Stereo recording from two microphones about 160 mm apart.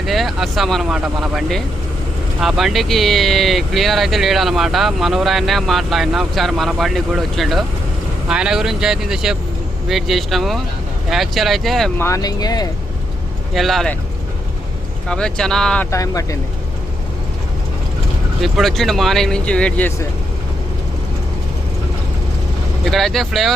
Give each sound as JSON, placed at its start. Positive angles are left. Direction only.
{"t": 0.0, "sound": "speech", "side_deg": 0}
{"t": 11.9, "sound": "speech", "side_deg": 20}
{"t": 13.5, "sound": "speech", "side_deg": 0}
{"t": 15.0, "sound": "speech", "side_deg": 5}
{"t": 15.9, "sound": "speech", "side_deg": 20}
{"t": 18.4, "sound": "speech", "side_deg": 0}
{"t": 22.9, "sound": "speech", "side_deg": 0}